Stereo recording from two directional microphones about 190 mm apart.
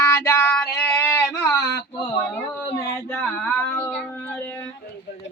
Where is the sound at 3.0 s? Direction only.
10° left (ahead or behind).